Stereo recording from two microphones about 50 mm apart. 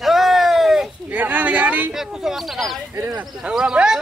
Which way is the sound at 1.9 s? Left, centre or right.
Centre.